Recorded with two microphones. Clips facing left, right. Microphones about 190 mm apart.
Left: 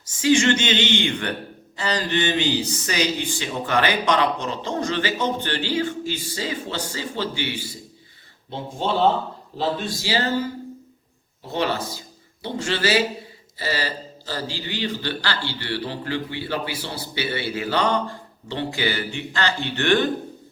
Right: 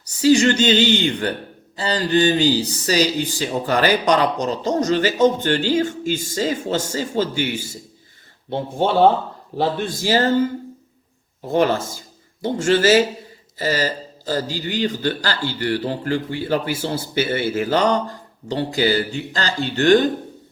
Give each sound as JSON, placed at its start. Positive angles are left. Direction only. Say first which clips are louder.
{"t": 0.0, "sound": "speech", "louder": "right 4 dB", "side_deg": -40}
{"t": 8.4, "sound": "a man's voice", "louder": "right 5 dB", "side_deg": -55}
{"t": 11.4, "sound": "a man's voice", "louder": "right 6 dB", "side_deg": -45}